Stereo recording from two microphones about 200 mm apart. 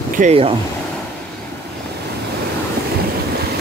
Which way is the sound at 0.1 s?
35° right (ahead or behind).